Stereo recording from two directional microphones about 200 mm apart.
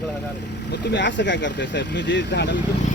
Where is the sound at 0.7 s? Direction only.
60° left (ahead or behind).